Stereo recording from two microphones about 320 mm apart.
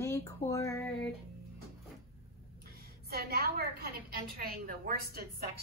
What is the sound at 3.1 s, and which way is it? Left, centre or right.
A woman's voice, right.